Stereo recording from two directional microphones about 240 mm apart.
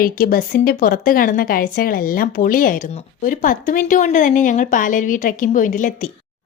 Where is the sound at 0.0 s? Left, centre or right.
Left.